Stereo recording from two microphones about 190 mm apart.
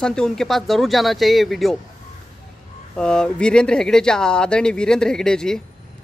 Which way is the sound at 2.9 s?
5° left (ahead or behind).